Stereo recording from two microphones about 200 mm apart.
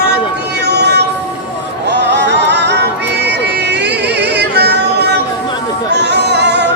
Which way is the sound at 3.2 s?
55° right (ahead or behind).